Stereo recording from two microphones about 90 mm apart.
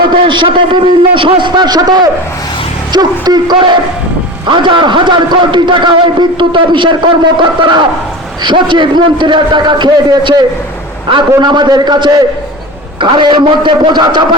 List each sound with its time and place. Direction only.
0.1 s a man's voice: 65° right (ahead or behind)
13.0 s a man's voice: 65° right (ahead or behind)